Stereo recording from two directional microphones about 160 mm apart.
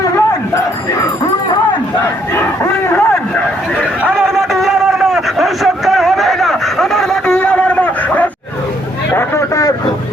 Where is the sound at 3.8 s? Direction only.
5° right (ahead or behind); by 9.7 s 20° left (ahead or behind).